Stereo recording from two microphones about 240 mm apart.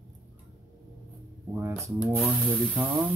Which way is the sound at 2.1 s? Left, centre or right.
Centre.